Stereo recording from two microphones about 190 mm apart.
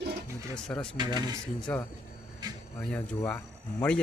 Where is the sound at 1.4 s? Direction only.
5° left (ahead or behind).